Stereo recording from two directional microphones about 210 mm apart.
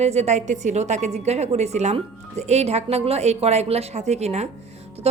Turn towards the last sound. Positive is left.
turn(degrees=-30)  # may be behind; listen again after turning